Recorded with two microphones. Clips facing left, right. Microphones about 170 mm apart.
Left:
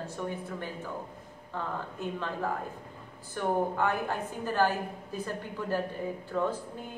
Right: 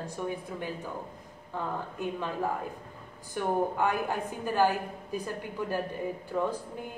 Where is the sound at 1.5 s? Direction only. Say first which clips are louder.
Right 2 dB; 15° right (ahead or behind).